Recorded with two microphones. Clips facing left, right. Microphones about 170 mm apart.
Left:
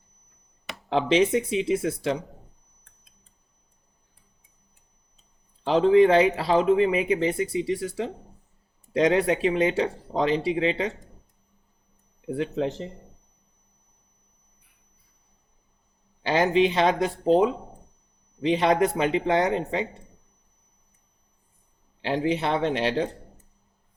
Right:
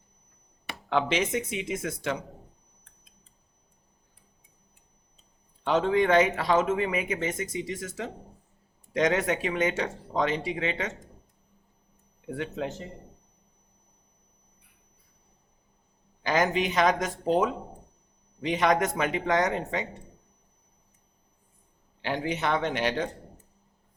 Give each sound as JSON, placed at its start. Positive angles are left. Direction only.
{"t": 1.1, "sound": "speech", "side_deg": 35}
{"t": 5.6, "sound": "speech", "side_deg": 30}
{"t": 12.3, "sound": "speech", "side_deg": 30}
{"t": 16.2, "sound": "speech", "side_deg": 30}
{"t": 22.0, "sound": "speech", "side_deg": 30}